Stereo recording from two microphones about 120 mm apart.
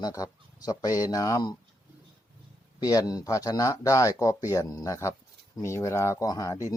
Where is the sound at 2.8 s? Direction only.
30° left (ahead or behind).